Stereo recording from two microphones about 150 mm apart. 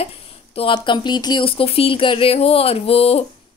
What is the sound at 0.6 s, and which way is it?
Speech, 35° left (ahead or behind).